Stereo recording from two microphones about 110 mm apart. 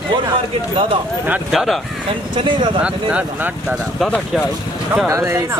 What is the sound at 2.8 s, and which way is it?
Speech, 10° right (ahead or behind).